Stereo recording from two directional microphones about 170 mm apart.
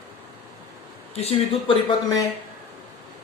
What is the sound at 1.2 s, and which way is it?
Speech, 35° left (ahead or behind).